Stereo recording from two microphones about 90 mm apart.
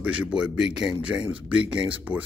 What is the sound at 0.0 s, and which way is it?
Speech, 15° right (ahead or behind).